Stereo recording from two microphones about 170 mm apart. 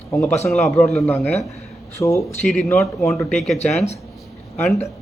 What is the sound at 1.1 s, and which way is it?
A man's voice, 15° left (ahead or behind).